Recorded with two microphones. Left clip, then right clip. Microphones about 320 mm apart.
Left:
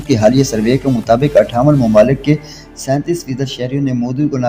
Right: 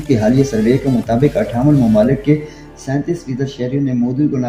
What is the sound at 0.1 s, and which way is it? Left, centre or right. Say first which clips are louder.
Speech: left 3 dB; left.